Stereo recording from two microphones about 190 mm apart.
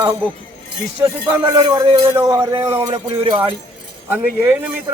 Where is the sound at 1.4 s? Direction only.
20° right (ahead or behind).